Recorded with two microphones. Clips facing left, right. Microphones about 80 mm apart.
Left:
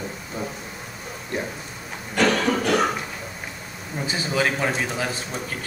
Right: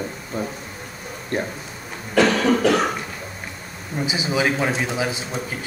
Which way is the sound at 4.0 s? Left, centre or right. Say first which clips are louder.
Right 2 dB; centre.